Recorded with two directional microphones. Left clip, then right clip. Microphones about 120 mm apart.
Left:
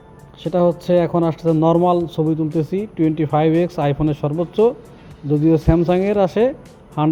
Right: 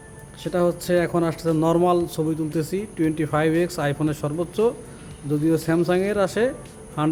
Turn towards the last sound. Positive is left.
turn(degrees=30)  # may be behind; listen again after turning